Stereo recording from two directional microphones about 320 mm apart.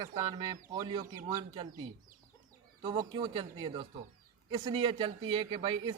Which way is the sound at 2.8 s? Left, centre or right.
Centre.